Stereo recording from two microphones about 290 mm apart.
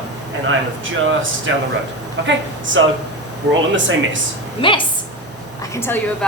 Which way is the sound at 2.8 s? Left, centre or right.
Right.